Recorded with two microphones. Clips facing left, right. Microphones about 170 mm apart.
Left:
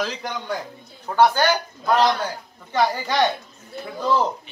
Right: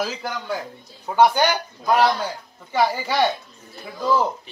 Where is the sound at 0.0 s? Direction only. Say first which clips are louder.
Even; 5° right (ahead or behind).